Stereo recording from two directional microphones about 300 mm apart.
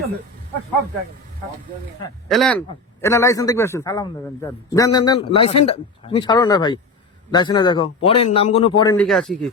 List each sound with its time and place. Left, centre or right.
2.3 s a man's voice: centre
9.0 s speech: centre